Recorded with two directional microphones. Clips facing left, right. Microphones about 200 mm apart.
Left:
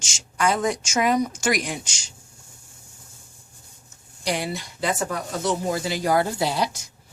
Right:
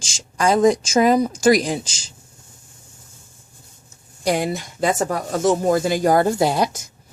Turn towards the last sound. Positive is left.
turn(degrees=-50)  # may be behind; listen again after turning